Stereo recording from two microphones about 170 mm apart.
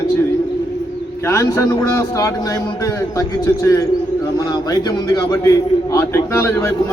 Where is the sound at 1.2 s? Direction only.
15° left (ahead or behind).